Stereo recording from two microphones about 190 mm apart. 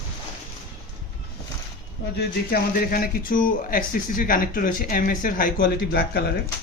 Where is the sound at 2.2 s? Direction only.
50° left (ahead or behind).